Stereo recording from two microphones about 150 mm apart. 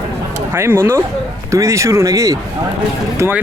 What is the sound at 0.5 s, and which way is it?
Speech, 15° right (ahead or behind).